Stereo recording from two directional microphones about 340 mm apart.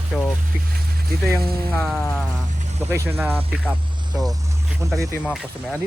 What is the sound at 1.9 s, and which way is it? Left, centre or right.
Speech, centre.